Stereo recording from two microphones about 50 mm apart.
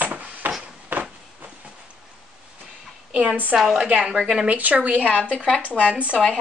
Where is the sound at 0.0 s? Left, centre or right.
Right.